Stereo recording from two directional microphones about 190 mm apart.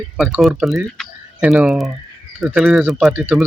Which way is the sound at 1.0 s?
5° right (ahead or behind).